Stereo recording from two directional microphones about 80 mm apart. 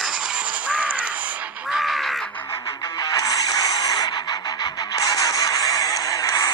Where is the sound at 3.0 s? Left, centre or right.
Left.